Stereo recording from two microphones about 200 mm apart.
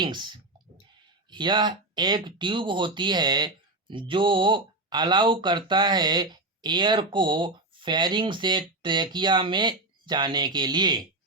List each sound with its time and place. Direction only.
0.0 s speech: 25° right (ahead or behind)